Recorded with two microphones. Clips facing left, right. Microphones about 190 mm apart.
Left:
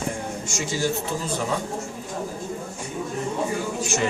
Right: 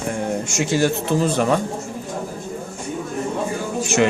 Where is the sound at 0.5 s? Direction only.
65° right (ahead or behind).